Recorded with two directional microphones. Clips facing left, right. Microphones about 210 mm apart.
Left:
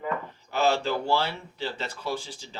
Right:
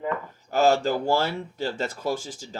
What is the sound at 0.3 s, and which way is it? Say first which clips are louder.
Speech: right 5 dB; 45° right (ahead or behind).